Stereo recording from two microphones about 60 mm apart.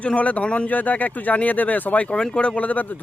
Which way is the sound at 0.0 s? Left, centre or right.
Left.